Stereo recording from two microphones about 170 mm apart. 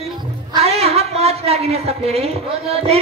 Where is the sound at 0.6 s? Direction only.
35° right (ahead or behind).